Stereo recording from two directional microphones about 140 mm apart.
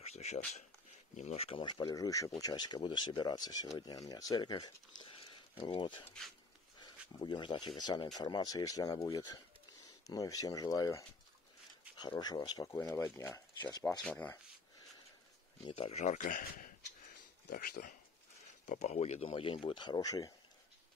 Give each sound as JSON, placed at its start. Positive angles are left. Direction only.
{"t": 0.0, "sound": "a sound", "side_deg": 50}
{"t": 1.1, "sound": "speech", "side_deg": 50}
{"t": 1.6, "sound": "speech", "side_deg": 30}
{"t": 6.0, "sound": "speech", "side_deg": 5}
{"t": 6.8, "sound": "speech", "side_deg": 30}
{"t": 13.6, "sound": "speech", "side_deg": 30}
{"t": 14.0, "sound": "speech", "side_deg": 5}
{"t": 15.6, "sound": "speech", "side_deg": 45}
{"t": 18.7, "sound": "speech", "side_deg": 55}